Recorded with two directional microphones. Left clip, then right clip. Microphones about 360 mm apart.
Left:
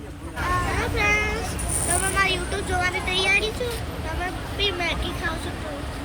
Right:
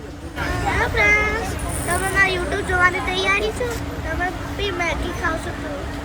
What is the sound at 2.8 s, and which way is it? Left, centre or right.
Speech, centre.